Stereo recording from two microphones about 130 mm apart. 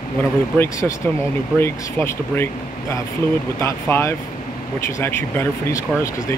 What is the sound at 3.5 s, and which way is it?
Speech, 20° left (ahead or behind).